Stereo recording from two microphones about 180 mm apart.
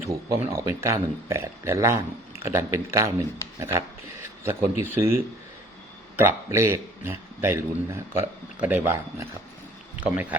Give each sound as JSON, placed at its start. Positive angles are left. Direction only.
{"t": 0.5, "sound": "a man's voice", "side_deg": -15}